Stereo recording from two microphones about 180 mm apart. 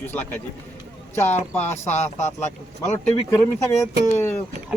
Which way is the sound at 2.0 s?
40° left (ahead or behind).